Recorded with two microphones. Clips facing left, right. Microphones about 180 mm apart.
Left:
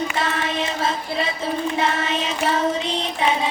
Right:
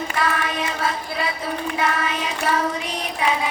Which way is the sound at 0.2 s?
25° left (ahead or behind).